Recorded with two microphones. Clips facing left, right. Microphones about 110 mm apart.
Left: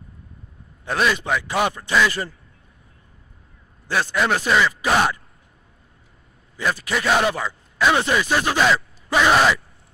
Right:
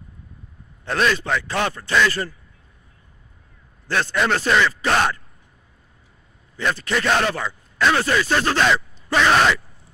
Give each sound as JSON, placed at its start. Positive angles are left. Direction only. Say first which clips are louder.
{"t": 0.8, "sound": "speech", "louder": "even", "side_deg": 10}
{"t": 3.8, "sound": "speech", "louder": "even", "side_deg": 10}
{"t": 6.5, "sound": "speech", "louder": "right 1 dB", "side_deg": 10}